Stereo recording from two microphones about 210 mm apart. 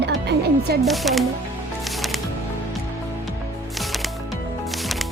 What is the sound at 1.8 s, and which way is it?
Music, centre (ahead or behind).